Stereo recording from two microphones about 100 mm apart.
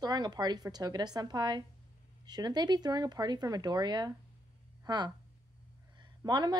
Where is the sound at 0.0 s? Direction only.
45° right (ahead or behind).